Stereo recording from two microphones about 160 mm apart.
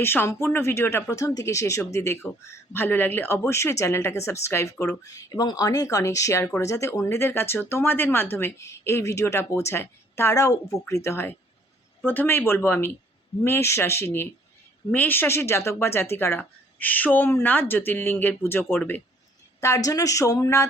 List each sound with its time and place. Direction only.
0.0 s speech: 15° left (ahead or behind)